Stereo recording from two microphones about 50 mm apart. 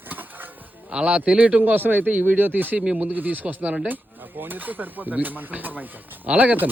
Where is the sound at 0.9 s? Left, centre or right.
Right.